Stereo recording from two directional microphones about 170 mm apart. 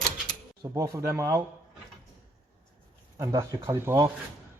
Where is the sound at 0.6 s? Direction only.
20° right (ahead or behind).